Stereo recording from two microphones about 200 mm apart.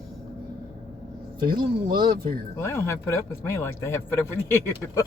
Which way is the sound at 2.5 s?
15° left (ahead or behind).